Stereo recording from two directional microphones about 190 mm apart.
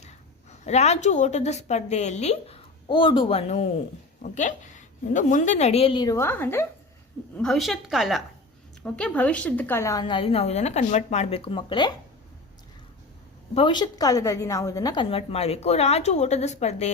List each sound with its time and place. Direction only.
0.6 s a woman's voice: 35° left (ahead or behind); by 6.7 s 10° left (ahead or behind)
7.3 s a woman's voice: centre (ahead or behind); by 11.9 s 25° left (ahead or behind)
13.5 s a woman's voice: 25° left (ahead or behind)